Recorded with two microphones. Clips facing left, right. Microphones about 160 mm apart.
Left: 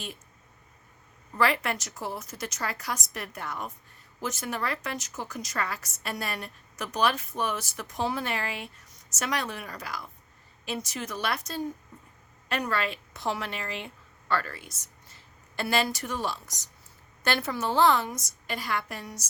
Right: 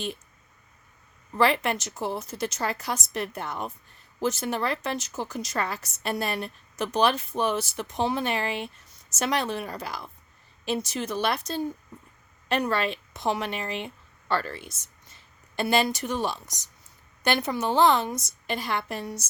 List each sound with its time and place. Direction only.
1.4 s a woman's voice: 20° right (ahead or behind)